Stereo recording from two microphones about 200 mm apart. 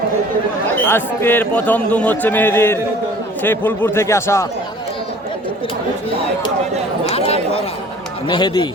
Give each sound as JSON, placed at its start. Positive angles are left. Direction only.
{"t": 0.9, "sound": "a man's voice", "side_deg": 10}
{"t": 7.1, "sound": "chatter", "side_deg": 30}
{"t": 8.3, "sound": "a man's voice", "side_deg": 20}